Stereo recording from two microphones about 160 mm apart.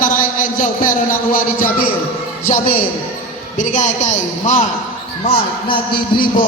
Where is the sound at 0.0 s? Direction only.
55° left (ahead or behind).